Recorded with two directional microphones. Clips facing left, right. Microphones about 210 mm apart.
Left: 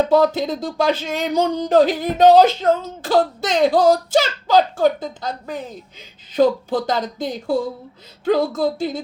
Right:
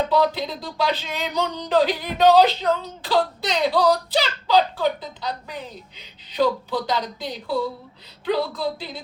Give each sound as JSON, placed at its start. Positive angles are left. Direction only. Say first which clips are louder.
{"t": 0.1, "sound": "speech", "louder": "left 5 dB", "side_deg": 50}